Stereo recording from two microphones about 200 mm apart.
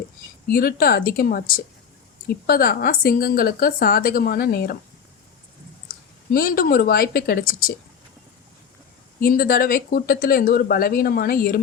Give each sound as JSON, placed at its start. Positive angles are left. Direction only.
{"t": 0.5, "sound": "speech", "side_deg": 50}
{"t": 5.9, "sound": "speech", "side_deg": 45}
{"t": 9.2, "sound": "speech", "side_deg": 45}